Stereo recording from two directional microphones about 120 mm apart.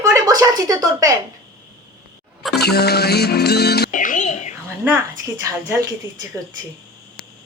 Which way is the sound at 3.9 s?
90° left.